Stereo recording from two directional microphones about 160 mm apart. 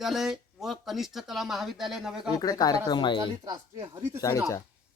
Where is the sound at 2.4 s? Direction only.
25° left (ahead or behind).